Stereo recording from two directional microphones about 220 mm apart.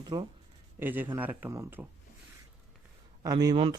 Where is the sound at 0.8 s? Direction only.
10° right (ahead or behind).